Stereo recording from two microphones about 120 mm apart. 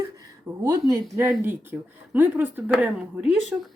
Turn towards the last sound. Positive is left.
turn(degrees=-5)  # may be behind; listen again after turning